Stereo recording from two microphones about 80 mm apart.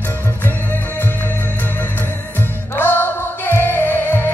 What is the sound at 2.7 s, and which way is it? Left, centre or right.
Music, left.